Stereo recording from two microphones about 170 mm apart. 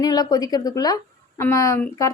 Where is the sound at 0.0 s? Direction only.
25° left (ahead or behind).